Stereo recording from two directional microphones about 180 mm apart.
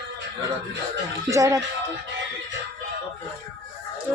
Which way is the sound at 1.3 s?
15° right (ahead or behind).